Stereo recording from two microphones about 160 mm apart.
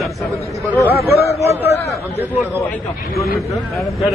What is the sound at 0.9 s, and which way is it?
Speech, 75° left (ahead or behind).